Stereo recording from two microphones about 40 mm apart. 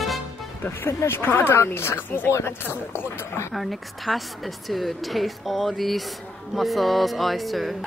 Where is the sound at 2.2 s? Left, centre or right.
Left.